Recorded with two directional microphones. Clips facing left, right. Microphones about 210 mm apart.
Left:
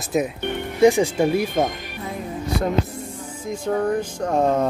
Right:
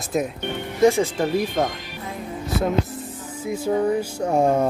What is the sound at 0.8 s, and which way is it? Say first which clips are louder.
Speech: left 2 dB; 15° left (ahead or behind).